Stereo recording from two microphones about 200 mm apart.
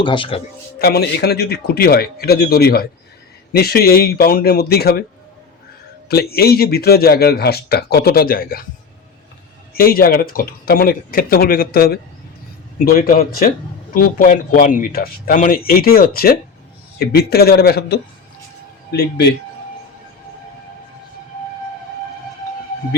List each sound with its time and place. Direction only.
0.0 s a man's voice: 25° left (ahead or behind)
0.8 s a man's voice: 55° left (ahead or behind)
6.1 s a man's voice: 50° left (ahead or behind)
9.7 s a man's voice: 50° left (ahead or behind)